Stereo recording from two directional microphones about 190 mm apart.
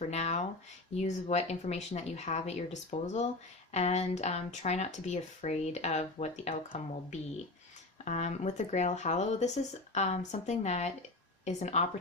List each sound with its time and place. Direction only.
0.1 s speech: 35° left (ahead or behind)